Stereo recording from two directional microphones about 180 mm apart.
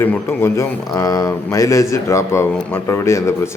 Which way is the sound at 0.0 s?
15° left (ahead or behind).